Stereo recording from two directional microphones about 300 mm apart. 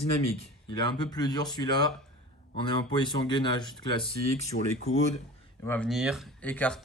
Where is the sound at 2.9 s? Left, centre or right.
Centre.